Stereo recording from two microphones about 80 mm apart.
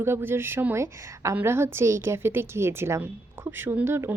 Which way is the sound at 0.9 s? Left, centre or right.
Right.